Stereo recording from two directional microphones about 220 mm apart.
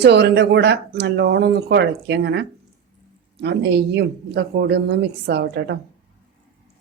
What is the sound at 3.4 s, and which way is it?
Speech, 50° right (ahead or behind).